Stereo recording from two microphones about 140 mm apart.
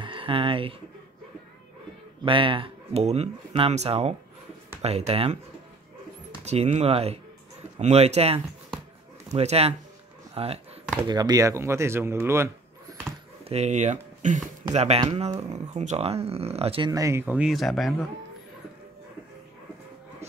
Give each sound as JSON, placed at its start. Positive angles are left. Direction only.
{"t": 0.0, "sound": "speech", "side_deg": -40}
{"t": 2.2, "sound": "speech", "side_deg": -40}
{"t": 6.4, "sound": "speech", "side_deg": -50}
{"t": 10.3, "sound": "a sound", "side_deg": -45}
{"t": 11.1, "sound": "speech", "side_deg": -30}
{"t": 13.4, "sound": "speech", "side_deg": -50}
{"t": 14.7, "sound": "speech", "side_deg": -50}
{"t": 16.9, "sound": "speech", "side_deg": -20}